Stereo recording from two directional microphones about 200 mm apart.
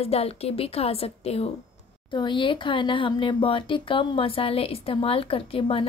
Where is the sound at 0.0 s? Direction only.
30° left (ahead or behind).